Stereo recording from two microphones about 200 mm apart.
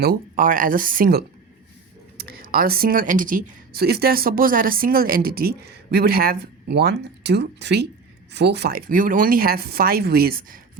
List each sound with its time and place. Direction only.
0.0 s speech: 45° right (ahead or behind)